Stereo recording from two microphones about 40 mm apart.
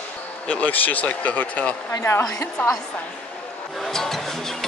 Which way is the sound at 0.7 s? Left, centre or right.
Left.